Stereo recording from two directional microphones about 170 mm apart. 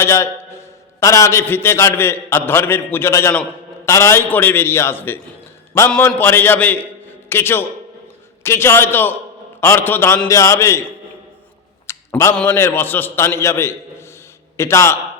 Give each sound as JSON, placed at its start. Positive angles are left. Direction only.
{"t": 0.0, "sound": "a man's voice", "side_deg": 15}
{"t": 11.9, "sound": "a man's voice", "side_deg": 15}